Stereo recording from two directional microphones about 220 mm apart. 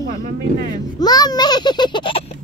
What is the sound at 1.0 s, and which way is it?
A child's voice, 20° left (ahead or behind).